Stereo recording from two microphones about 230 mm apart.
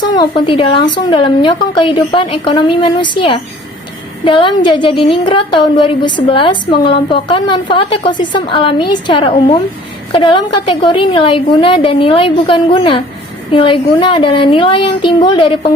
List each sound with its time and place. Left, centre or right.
0.1 s a woman's voice: centre